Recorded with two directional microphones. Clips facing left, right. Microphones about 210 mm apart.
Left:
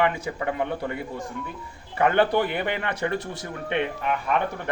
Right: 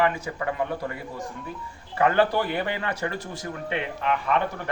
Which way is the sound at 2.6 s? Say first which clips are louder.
Left 1 dB; 20° left (ahead or behind).